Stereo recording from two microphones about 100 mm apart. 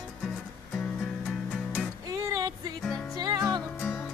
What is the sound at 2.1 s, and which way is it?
Music, 35° right (ahead or behind).